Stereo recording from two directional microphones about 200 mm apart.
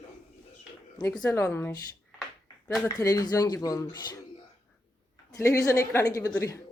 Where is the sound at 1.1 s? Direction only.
5° left (ahead or behind).